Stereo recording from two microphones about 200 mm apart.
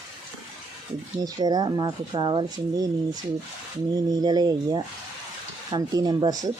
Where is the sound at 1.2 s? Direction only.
20° right (ahead or behind).